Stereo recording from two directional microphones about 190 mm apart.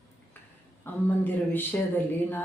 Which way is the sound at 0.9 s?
10° left (ahead or behind).